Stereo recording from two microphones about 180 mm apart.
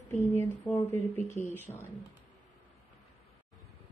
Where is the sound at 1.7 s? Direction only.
25° left (ahead or behind).